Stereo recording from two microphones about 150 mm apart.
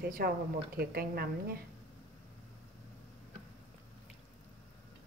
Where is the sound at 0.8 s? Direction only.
90° right.